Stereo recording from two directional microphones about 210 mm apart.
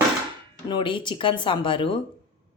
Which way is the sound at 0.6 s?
20° left (ahead or behind).